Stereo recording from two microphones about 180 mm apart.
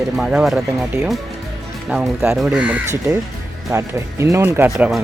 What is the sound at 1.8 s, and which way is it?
Speech, 5° right (ahead or behind).